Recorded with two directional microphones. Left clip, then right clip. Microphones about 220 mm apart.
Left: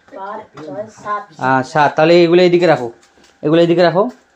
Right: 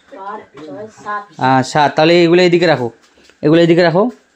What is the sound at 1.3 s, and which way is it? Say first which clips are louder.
A man's voice: right 2 dB; 40° right (ahead or behind).